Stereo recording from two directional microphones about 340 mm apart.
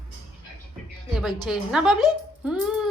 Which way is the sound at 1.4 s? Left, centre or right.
Centre.